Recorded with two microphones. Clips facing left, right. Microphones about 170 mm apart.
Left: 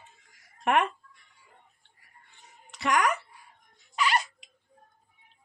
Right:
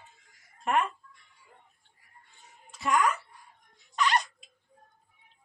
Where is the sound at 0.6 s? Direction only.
75° left (ahead or behind).